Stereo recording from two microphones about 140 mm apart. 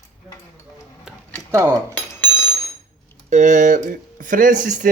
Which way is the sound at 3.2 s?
60° right (ahead or behind).